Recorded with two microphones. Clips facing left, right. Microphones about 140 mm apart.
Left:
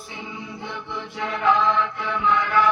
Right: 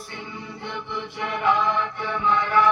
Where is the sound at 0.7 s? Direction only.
65° right (ahead or behind).